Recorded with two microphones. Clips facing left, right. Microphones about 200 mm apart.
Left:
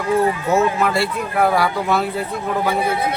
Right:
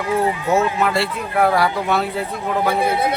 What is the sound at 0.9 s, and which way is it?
Speech, centre (ahead or behind).